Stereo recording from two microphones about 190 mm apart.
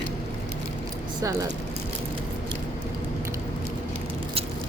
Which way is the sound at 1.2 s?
20° right (ahead or behind).